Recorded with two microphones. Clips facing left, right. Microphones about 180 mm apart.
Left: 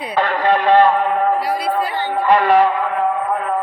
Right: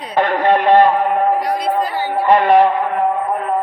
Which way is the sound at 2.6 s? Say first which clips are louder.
Right 2 dB; 25° right (ahead or behind).